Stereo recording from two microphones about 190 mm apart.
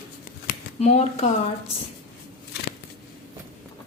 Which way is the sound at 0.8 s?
35° left (ahead or behind).